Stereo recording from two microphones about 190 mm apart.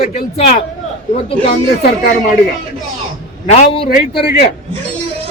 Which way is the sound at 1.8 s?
45° left (ahead or behind).